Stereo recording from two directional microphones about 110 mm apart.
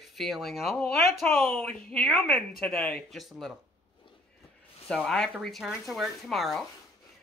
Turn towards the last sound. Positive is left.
turn(degrees=0)  # may be behind; listen again after turning